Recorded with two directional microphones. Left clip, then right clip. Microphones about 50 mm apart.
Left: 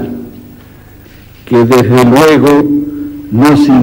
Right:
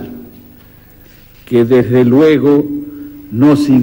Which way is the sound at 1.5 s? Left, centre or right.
Centre.